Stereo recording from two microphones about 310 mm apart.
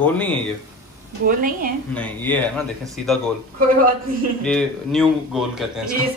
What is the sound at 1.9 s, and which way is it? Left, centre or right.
A man's voice, centre.